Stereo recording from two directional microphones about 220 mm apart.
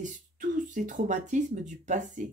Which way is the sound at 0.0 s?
35° right (ahead or behind).